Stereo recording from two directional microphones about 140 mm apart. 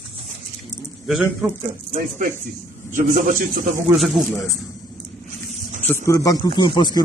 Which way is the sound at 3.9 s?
Centre (ahead or behind).